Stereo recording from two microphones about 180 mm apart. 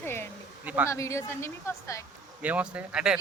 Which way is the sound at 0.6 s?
10° right (ahead or behind).